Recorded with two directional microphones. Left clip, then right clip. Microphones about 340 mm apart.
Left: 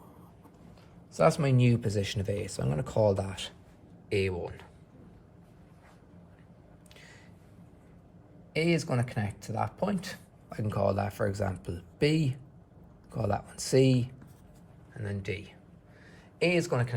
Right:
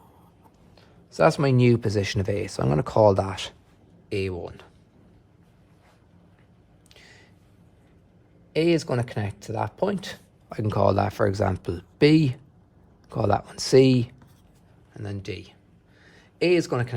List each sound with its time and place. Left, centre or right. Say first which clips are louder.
0.8 s speech: right 5 dB; right
4.1 s speech: right 1 dB; centre
8.5 s speech: right 7 dB; right
14.9 s speech: right 2 dB; centre
16.0 s a sound: right 6 dB; right